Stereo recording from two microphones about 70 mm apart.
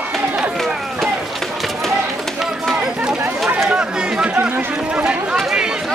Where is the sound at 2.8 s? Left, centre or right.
Centre.